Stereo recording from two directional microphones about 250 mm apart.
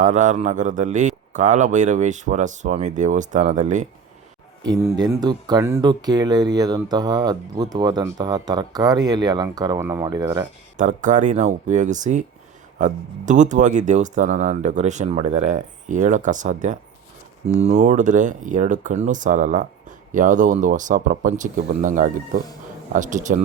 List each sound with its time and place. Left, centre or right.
0.0 s speech: right
4.6 s speech: centre
10.8 s speech: right